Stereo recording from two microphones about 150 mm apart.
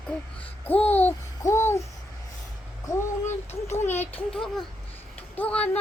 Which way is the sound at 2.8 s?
15° left (ahead or behind).